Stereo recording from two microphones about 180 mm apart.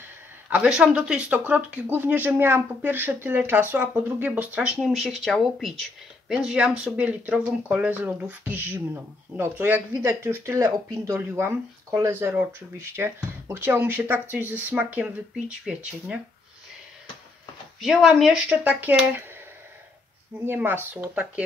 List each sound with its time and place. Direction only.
0.5 s speech: 5° right (ahead or behind)
17.7 s speech: centre (ahead or behind)
20.4 s speech: 10° right (ahead or behind)